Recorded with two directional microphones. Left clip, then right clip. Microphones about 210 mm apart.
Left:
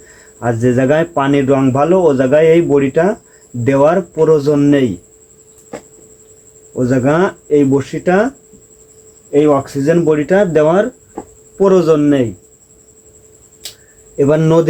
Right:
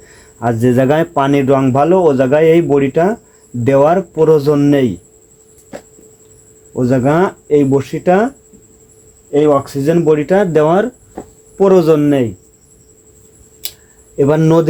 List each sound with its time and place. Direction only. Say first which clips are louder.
0.3 s speech: right 1 dB; 25° right (ahead or behind)
6.7 s speech: even; 25° right (ahead or behind)
9.3 s speech: even; 20° right (ahead or behind)
14.2 s a man's voice: even; 20° right (ahead or behind)